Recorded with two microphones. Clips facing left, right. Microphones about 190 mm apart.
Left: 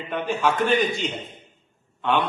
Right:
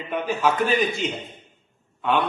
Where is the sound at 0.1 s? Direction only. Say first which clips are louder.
Right 1 dB; 5° right (ahead or behind).